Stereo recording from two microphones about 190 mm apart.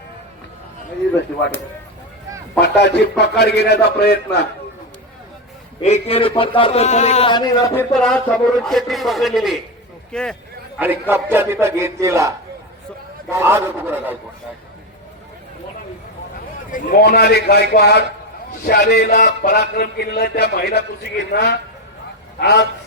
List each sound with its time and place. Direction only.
2.6 s speech: 60° left (ahead or behind)
5.8 s speech: 35° left (ahead or behind)
7.9 s a man's voice: 5° left (ahead or behind)
11.1 s speech: 10° right (ahead or behind)
13.3 s speech: 15° right (ahead or behind)
16.7 s a man's voice: 50° left (ahead or behind)